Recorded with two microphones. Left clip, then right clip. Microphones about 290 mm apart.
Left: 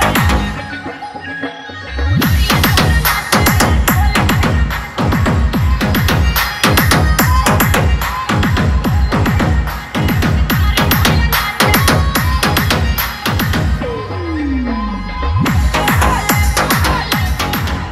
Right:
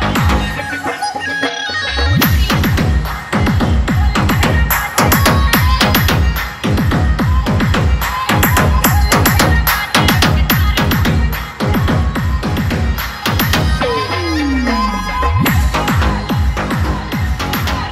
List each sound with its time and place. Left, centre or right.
3.3 s music: left
4.1 s music: centre
4.9 s music: right
5.8 s music: centre
9.1 s music: right
9.9 s music: right
11.6 s music: left
15.7 s music: centre
16.3 s music: left